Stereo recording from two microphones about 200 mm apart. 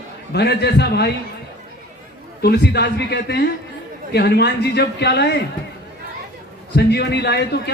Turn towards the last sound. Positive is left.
turn(degrees=55)  # may be behind; listen again after turning